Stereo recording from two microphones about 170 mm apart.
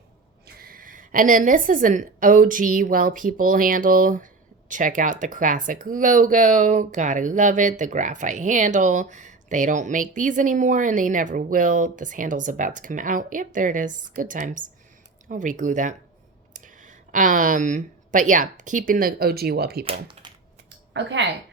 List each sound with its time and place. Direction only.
0.4 s a woman's voice: 60° right (ahead or behind)
19.8 s speech: 30° right (ahead or behind)
20.9 s a woman's voice: 90° right